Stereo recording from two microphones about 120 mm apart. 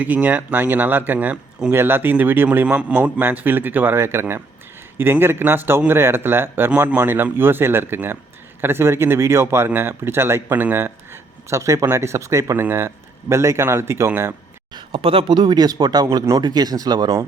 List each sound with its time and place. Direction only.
0.0 s a man's voice: 15° right (ahead or behind)
14.7 s speech: 45° right (ahead or behind)